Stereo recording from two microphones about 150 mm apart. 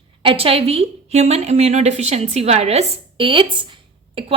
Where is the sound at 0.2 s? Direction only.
35° right (ahead or behind).